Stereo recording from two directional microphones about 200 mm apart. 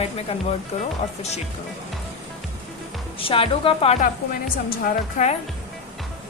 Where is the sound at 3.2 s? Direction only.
25° left (ahead or behind).